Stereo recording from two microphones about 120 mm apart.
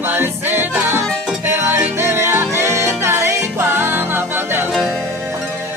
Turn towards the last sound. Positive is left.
turn(degrees=-20)  # may be behind; listen again after turning